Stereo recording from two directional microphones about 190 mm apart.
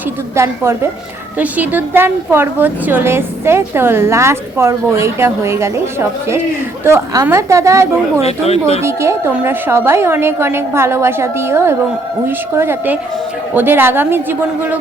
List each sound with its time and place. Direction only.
0.3 s a woman's voice: 15° right (ahead or behind)
8.2 s speech: 35° left (ahead or behind)
8.8 s a woman's voice: 15° right (ahead or behind)